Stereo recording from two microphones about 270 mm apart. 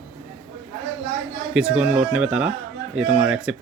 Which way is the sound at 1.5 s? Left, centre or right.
Centre.